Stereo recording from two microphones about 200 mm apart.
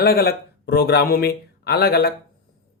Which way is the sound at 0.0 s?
50° left (ahead or behind).